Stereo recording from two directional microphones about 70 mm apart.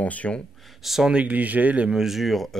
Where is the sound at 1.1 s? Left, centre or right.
Right.